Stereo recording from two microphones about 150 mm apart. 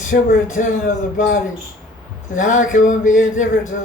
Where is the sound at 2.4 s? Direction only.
55° left (ahead or behind).